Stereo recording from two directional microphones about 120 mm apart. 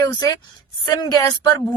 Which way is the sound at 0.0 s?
30° left (ahead or behind).